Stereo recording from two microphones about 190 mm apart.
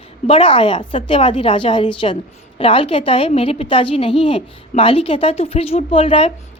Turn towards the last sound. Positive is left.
turn(degrees=30)  # may be behind; listen again after turning